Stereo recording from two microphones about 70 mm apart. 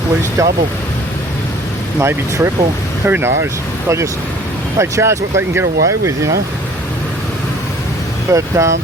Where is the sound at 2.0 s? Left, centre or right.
Right.